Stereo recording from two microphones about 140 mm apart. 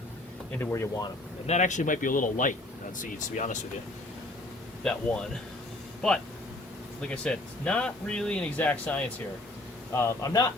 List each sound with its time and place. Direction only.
0.6 s a man's voice: 20° left (ahead or behind)
1.5 s speech: 55° left (ahead or behind)
4.8 s a man's voice: 5° left (ahead or behind); by 10.4 s 20° left (ahead or behind)